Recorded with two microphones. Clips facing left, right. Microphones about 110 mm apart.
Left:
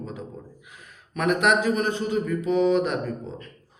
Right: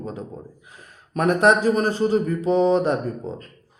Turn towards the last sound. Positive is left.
turn(degrees=-40)  # may be behind; listen again after turning